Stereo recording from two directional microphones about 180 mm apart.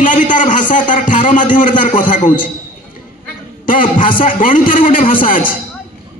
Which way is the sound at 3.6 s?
50° left (ahead or behind).